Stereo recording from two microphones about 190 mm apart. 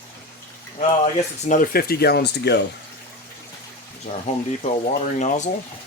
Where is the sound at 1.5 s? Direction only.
45° left (ahead or behind); by 2.6 s 60° left (ahead or behind).